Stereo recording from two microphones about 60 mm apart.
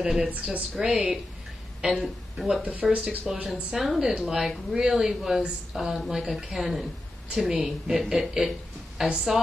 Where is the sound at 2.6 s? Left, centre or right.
Right.